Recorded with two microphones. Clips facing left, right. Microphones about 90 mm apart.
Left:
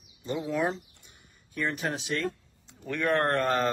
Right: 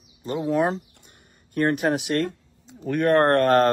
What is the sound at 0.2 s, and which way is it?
Speech, 40° right (ahead or behind).